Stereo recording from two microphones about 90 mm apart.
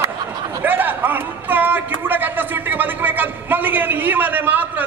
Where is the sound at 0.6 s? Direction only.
20° right (ahead or behind).